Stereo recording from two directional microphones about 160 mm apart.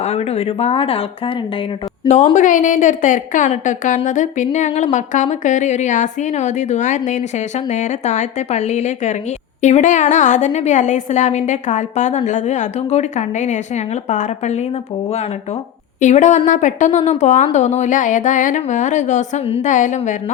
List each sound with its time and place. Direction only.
0.0 s speech: 40° left (ahead or behind)
2.3 s a woman's voice: 55° left (ahead or behind)
16.0 s a woman's voice: 50° left (ahead or behind)